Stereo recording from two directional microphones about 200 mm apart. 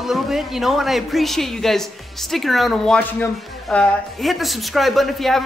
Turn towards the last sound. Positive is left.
turn(degrees=0)  # may be behind; listen again after turning